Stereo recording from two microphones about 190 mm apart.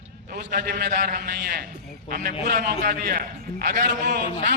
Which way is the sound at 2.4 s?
55° right (ahead or behind).